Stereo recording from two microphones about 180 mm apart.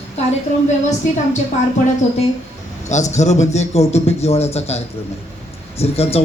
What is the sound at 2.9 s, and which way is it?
A man's voice, 40° left (ahead or behind).